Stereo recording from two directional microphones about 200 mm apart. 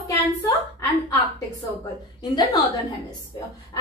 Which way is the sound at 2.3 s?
20° left (ahead or behind).